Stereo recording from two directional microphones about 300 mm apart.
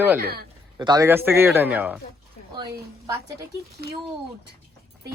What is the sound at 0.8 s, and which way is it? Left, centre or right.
A man's voice, centre.